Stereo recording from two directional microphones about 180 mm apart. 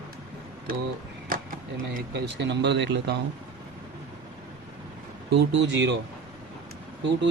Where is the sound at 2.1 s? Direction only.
70° right (ahead or behind).